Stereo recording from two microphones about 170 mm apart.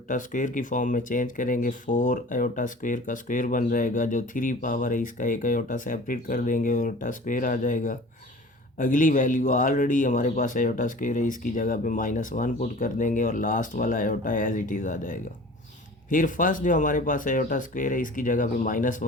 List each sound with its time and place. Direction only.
0.1 s speech: 50° left (ahead or behind)